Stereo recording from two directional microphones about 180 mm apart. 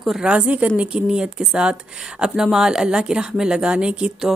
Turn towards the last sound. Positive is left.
turn(degrees=-5)  # may be behind; listen again after turning